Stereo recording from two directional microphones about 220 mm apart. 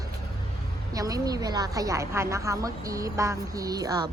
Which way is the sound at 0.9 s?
15° right (ahead or behind).